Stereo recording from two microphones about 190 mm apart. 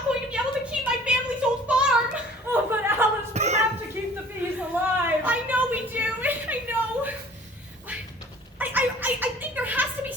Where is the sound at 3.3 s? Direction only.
35° right (ahead or behind).